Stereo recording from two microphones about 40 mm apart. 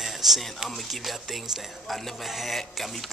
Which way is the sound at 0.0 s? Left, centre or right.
Centre.